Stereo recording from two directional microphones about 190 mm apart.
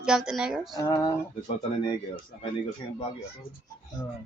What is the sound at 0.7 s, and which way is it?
Speech, 20° left (ahead or behind).